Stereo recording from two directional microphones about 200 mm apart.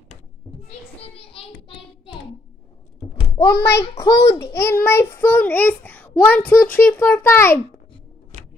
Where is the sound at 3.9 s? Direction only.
25° left (ahead or behind).